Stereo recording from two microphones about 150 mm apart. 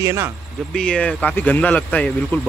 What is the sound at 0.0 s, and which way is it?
Speech, 20° right (ahead or behind).